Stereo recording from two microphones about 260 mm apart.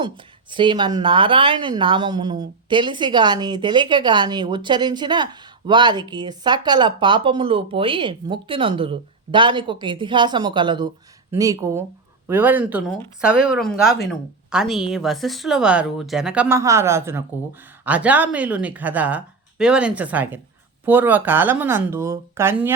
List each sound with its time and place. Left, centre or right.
0.5 s speech: centre